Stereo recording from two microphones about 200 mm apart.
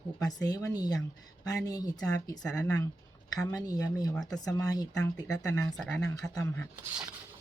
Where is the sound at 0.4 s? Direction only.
20° left (ahead or behind).